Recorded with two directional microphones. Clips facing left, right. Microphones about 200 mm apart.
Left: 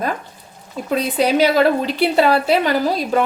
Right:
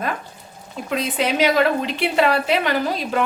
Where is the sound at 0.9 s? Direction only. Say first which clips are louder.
Left 5 dB; 35° left (ahead or behind).